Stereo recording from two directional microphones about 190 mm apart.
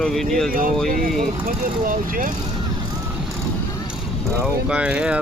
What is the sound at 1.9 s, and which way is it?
Speech, 45° right (ahead or behind).